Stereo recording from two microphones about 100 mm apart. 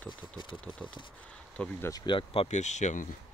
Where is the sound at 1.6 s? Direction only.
10° left (ahead or behind).